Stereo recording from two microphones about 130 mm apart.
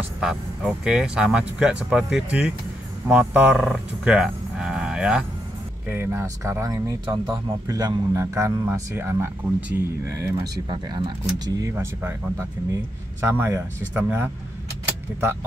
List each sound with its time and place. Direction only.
0.2 s speech: 5° right (ahead or behind)
3.5 s cattle: centre (ahead or behind)
5.9 s a man's voice: 15° right (ahead or behind)
11.7 s speech: 15° right (ahead or behind)